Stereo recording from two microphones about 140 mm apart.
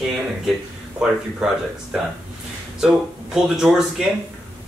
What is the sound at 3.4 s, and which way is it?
Speech, 5° right (ahead or behind).